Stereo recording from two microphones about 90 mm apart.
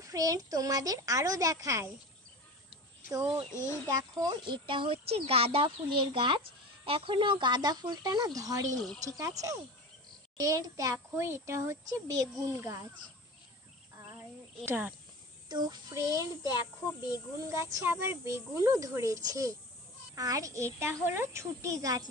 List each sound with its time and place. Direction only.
0.0 s a child's voice: 40° right (ahead or behind)
3.5 s speech: 30° left (ahead or behind)
3.8 s speech: 40° right (ahead or behind)
4.5 s a child's voice: 70° right (ahead or behind)
6.9 s a child's voice: 90° right; by 12.7 s 40° right (ahead or behind)
14.6 s speech: 25° right (ahead or behind)
15.4 s child singing: 50° right (ahead or behind)
16.0 s a child's voice: 40° right (ahead or behind)
17.4 s a child's voice: 30° right (ahead or behind)